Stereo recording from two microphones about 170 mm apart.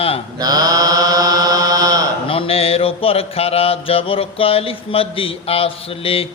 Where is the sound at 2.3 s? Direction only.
35° left (ahead or behind).